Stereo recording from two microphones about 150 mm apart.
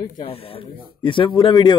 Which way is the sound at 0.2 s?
40° left (ahead or behind).